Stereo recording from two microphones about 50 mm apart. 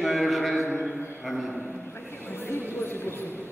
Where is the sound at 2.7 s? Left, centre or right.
Left.